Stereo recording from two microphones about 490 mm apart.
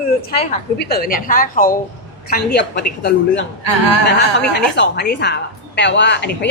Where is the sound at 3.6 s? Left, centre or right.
Right.